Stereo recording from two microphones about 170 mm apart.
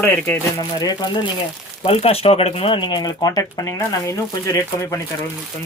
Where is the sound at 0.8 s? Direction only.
20° left (ahead or behind).